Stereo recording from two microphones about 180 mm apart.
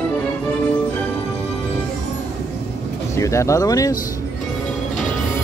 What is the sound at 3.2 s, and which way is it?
Speech, 15° left (ahead or behind).